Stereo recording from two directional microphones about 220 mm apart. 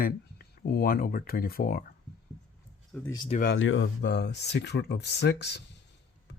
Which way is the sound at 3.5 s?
60° left (ahead or behind).